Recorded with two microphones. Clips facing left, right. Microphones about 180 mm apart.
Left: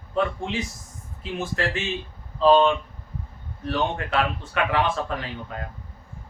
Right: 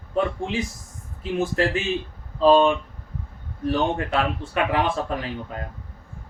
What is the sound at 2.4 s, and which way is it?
Speech, 10° right (ahead or behind).